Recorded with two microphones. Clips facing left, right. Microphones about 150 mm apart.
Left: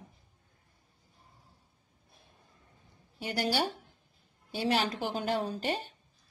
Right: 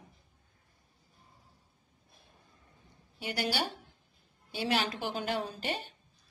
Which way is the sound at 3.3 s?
40° left (ahead or behind).